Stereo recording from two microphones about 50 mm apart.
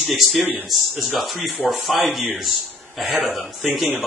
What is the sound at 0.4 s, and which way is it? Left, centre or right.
Speech, right.